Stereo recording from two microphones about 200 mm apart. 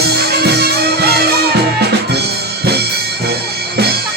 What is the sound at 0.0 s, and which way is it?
Music, 55° right (ahead or behind).